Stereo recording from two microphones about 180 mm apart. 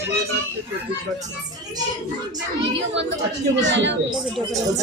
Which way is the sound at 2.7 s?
80° right.